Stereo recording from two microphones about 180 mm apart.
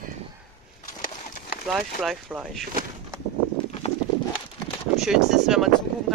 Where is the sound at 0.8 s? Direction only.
50° left (ahead or behind).